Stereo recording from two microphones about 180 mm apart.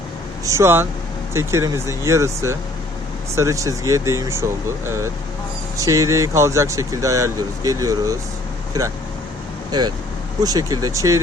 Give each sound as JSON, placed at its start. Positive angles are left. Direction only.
{"t": 0.4, "sound": "speech", "side_deg": -15}
{"t": 5.7, "sound": "speech", "side_deg": -20}